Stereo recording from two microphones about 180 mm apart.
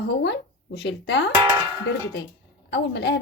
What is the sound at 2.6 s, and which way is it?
Speech, 70° left (ahead or behind).